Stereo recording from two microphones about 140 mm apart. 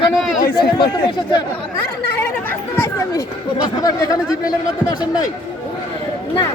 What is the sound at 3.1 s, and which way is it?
Speech, 25° left (ahead or behind).